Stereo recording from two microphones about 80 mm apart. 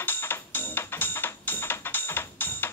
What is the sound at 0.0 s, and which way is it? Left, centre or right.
Music, left.